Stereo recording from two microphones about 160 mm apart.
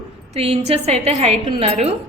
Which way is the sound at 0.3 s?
40° right (ahead or behind).